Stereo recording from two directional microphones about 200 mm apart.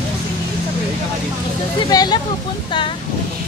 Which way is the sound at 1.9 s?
20° left (ahead or behind).